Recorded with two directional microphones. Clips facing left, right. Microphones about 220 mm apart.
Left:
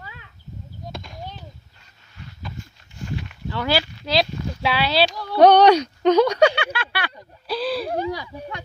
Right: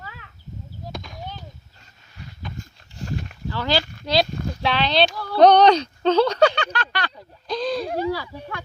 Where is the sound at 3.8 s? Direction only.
50° right (ahead or behind).